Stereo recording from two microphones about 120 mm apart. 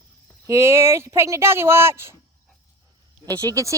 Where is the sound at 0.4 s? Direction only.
25° right (ahead or behind).